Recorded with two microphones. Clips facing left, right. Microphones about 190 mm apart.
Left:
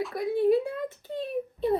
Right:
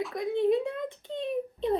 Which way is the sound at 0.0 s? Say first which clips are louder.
Left 2 dB; 5° left (ahead or behind).